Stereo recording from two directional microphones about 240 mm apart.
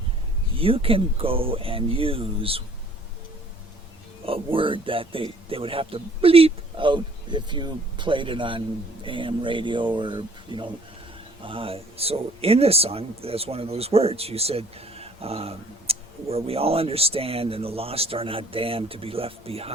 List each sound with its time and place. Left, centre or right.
0.5 s speech: right
4.3 s speech: right